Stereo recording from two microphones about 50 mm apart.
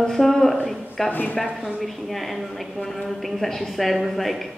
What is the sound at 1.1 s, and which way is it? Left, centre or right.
Speech, left.